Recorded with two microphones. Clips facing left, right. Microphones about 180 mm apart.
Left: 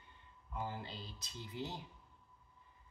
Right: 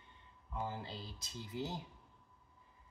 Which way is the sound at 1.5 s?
40° right (ahead or behind).